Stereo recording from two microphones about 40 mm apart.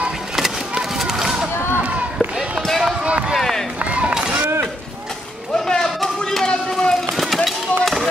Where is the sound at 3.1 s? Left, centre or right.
Right.